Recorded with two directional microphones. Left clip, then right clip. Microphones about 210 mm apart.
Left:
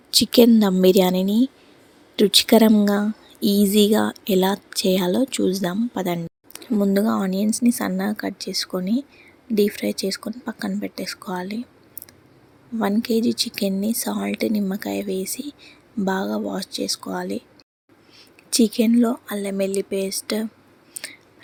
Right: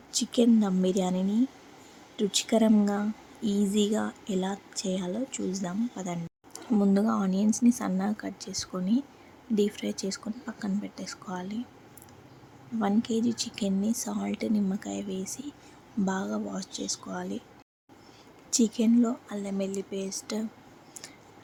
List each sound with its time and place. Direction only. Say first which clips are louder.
0.2 s a woman's voice: left 10 dB; 25° left (ahead or behind)
6.7 s speech: left 6 dB; 15° left (ahead or behind)
13.0 s speech: left 8 dB; 20° left (ahead or behind)
18.5 s speech: left 7 dB; 20° left (ahead or behind)
21.0 s a sound: left 13 dB; 15° left (ahead or behind)